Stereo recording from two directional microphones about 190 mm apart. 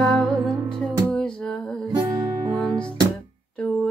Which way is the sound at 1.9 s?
15° right (ahead or behind).